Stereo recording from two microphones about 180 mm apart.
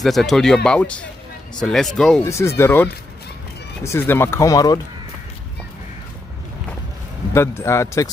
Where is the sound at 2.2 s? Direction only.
15° left (ahead or behind).